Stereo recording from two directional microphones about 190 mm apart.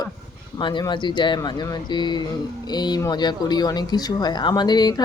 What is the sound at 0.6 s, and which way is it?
Speech, 25° left (ahead or behind).